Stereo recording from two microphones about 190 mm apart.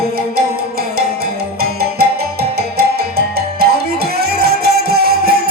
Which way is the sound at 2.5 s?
55° right (ahead or behind).